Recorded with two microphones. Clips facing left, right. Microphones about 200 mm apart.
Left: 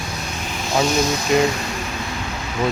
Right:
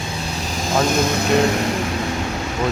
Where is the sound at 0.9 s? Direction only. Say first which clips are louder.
Right 1 dB; 55° right (ahead or behind).